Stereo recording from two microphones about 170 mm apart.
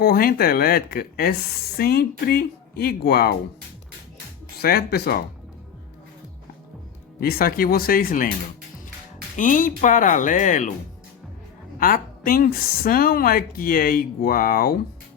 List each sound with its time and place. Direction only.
0.0 s speech: 60° left (ahead or behind)
4.6 s speech: 65° left (ahead or behind)
7.2 s speech: 60° left (ahead or behind)
9.3 s speech: 50° left (ahead or behind)
11.8 s speech: 55° left (ahead or behind)